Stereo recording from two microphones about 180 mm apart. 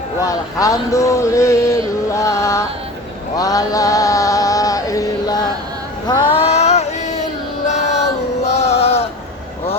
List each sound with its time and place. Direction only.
0.2 s speech: 20° left (ahead or behind)
2.0 s music: 15° left (ahead or behind)
3.3 s chant: 20° left (ahead or behind)
6.1 s a sound: 35° left (ahead or behind)
7.7 s female singing: 40° left (ahead or behind)
8.4 s a sound: 35° left (ahead or behind)